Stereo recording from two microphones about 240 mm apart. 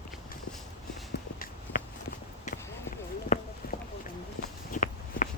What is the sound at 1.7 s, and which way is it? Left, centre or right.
Walk, left.